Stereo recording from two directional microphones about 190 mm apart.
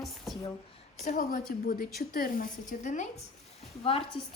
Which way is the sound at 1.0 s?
45° left (ahead or behind).